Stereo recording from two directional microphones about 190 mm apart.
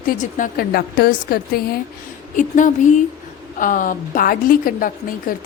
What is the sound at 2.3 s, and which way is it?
A woman's voice, 40° left (ahead or behind).